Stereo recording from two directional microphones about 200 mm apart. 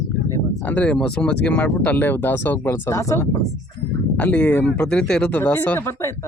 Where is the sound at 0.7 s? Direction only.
5° left (ahead or behind).